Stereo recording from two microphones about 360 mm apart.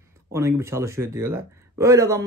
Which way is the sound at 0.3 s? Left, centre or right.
Centre.